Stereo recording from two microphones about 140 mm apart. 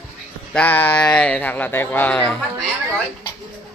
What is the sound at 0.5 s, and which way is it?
Speech, 15° left (ahead or behind).